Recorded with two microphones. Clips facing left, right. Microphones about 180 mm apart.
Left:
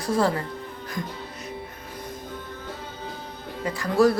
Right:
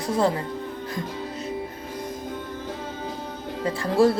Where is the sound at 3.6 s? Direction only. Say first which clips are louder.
Even; 30° right (ahead or behind).